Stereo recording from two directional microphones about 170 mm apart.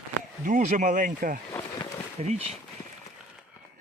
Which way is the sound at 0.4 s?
50° right (ahead or behind).